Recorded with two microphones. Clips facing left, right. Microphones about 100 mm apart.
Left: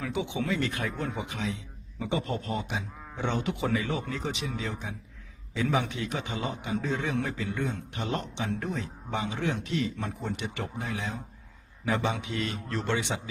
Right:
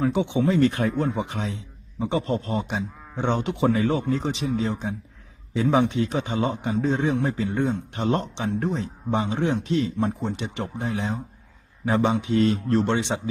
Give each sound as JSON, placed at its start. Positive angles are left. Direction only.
{"t": 0.0, "sound": "speech", "side_deg": -35}